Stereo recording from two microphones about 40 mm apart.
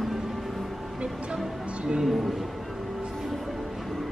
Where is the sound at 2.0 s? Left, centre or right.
Centre.